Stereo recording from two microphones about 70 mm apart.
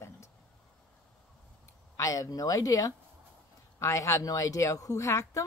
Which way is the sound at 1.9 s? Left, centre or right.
Left.